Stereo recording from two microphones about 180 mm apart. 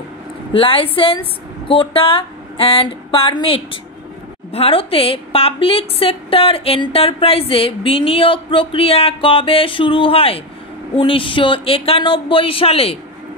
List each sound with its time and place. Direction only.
0.5 s a woman's voice: 30° left (ahead or behind)